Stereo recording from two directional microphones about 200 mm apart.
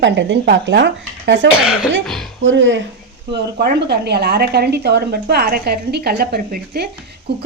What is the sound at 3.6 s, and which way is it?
A woman's voice, 55° right (ahead or behind).